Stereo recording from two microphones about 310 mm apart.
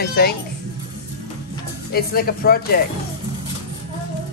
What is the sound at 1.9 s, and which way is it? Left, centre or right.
Speech, left.